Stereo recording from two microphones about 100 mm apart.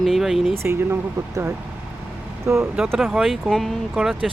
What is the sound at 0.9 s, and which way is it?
Speech, 30° right (ahead or behind).